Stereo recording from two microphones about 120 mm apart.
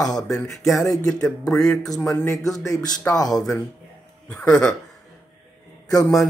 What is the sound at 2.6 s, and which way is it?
Speech, 25° left (ahead or behind).